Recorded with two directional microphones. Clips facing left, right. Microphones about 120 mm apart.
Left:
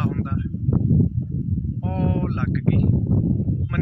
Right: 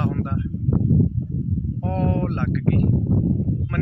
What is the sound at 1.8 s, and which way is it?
Speech, 5° left (ahead or behind).